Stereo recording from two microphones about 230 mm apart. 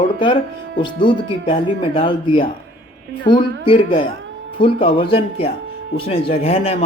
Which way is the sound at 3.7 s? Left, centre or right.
Left.